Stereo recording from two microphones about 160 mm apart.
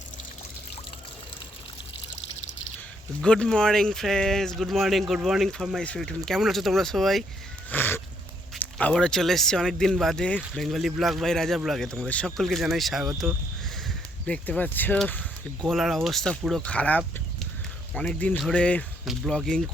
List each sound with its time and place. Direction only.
3.2 s speech: 5° left (ahead or behind)
7.7 s a sound: 15° left (ahead or behind)
8.8 s speech: 5° left (ahead or behind)
15.6 s speech: centre (ahead or behind)